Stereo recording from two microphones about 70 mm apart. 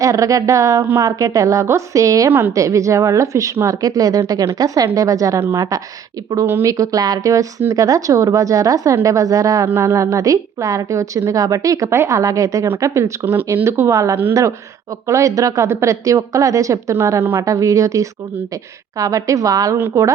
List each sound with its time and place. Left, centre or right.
0.0 s a woman's voice: right
6.4 s a woman's voice: right
6.7 s a woman's voice: right
9.6 s a woman's voice: right
17.4 s a woman's voice: right
19.9 s a woman's voice: right